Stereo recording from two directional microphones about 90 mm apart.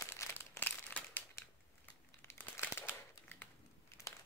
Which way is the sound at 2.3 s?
25° left (ahead or behind).